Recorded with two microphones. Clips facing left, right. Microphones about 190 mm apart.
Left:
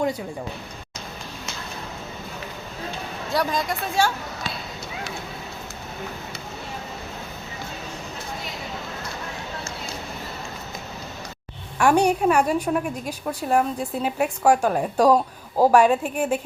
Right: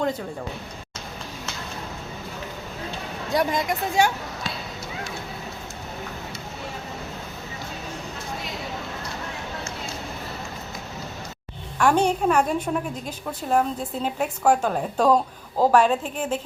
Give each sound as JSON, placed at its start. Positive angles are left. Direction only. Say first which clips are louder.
{"t": 3.2, "sound": "speech", "louder": "right 1 dB", "side_deg": -20}
{"t": 11.8, "sound": "a woman's voice", "louder": "left 2 dB", "side_deg": 10}